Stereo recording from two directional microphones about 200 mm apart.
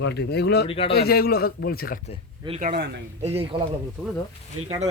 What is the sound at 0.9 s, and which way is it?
Speech, 50° left (ahead or behind).